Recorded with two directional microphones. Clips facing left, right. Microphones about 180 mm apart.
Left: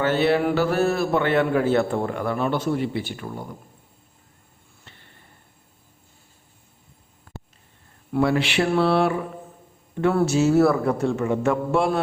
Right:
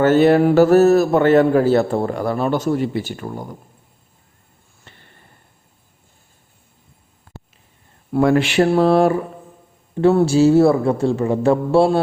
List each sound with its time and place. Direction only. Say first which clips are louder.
0.0 s a man's voice: right 7 dB; 45° right (ahead or behind)
4.9 s a sound: right 3 dB; 50° right (ahead or behind)
8.1 s a man's voice: right 6 dB; 45° right (ahead or behind)
9.9 s a man's voice: right 6 dB; 30° right (ahead or behind)